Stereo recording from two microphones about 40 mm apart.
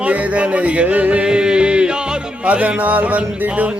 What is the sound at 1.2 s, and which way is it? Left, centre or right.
Music, right.